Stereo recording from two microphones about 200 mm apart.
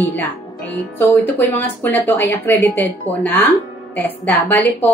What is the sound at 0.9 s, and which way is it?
A woman's voice, 10° left (ahead or behind).